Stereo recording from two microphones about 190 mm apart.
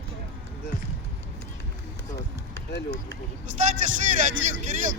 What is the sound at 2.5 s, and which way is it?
Speech, 60° left (ahead or behind).